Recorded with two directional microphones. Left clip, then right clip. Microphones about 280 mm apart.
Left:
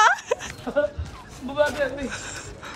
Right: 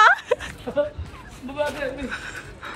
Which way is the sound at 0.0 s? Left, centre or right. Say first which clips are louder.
Right 3 dB; centre.